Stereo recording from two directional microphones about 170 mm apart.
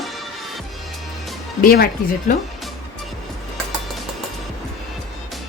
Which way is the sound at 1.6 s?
60° left (ahead or behind).